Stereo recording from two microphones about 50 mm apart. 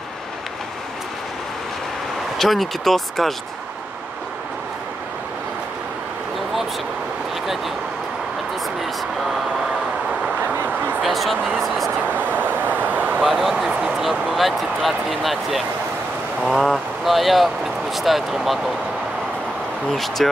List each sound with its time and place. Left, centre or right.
2.3 s speech: centre
10.4 s a sound: right
11.0 s speech: centre
12.1 s vehicle: right
13.2 s speech: centre
19.9 s speech: centre